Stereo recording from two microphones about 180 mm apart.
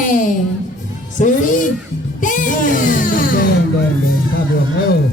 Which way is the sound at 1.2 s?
45° left (ahead or behind).